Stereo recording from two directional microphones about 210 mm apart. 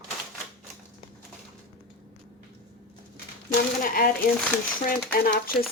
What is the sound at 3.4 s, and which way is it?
Speech, 40° left (ahead or behind).